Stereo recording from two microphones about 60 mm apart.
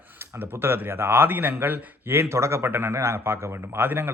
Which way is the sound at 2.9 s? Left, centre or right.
Right.